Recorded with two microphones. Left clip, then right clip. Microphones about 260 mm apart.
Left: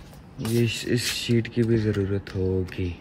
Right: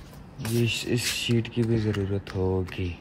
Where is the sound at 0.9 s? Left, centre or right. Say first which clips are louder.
Left 2 dB; centre.